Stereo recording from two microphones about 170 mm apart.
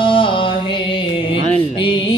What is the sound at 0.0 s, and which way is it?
Music, 30° left (ahead or behind).